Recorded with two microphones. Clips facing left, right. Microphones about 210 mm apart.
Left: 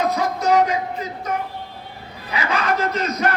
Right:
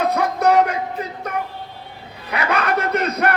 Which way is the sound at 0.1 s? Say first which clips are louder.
Right 2 dB; 60° right (ahead or behind).